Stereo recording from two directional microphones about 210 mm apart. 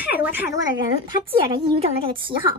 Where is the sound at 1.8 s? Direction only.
25° right (ahead or behind).